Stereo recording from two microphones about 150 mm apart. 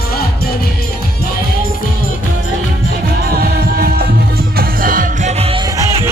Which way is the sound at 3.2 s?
90° right.